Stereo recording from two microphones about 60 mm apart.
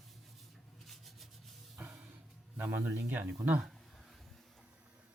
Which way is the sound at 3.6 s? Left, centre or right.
Centre.